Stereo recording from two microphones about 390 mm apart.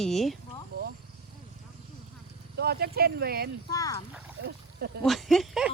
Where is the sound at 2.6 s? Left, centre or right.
Right.